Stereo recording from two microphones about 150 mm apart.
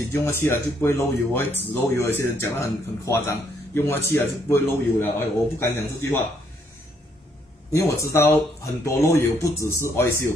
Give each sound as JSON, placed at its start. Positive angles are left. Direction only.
{"t": 0.1, "sound": "speech", "side_deg": 15}
{"t": 7.7, "sound": "speech", "side_deg": 20}